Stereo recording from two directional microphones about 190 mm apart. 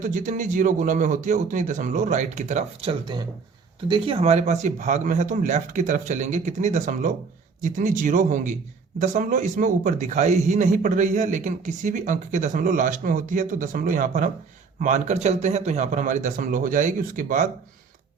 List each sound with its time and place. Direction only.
0.0 s speech: 40° right (ahead or behind)